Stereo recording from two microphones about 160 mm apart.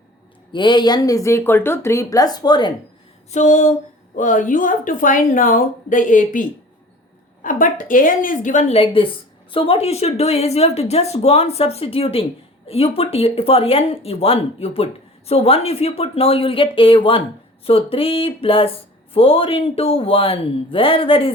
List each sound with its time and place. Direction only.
0.5 s speech: 30° left (ahead or behind)
3.3 s a woman's voice: 50° left (ahead or behind); by 21.3 s 35° left (ahead or behind)